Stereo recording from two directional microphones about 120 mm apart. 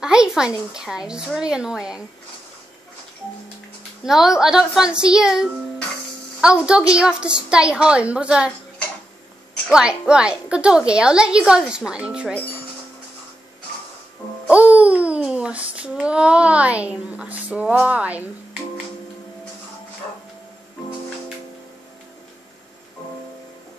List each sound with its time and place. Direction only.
0.0 s a woman's voice: 5° right (ahead or behind)
4.0 s a woman's voice: 5° right (ahead or behind)
9.7 s a woman's voice: 10° right (ahead or behind)
14.5 s a sound: 10° right (ahead or behind)